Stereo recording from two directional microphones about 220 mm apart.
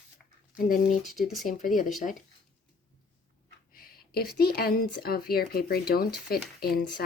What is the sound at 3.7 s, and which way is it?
A woman's voice, 45° left (ahead or behind).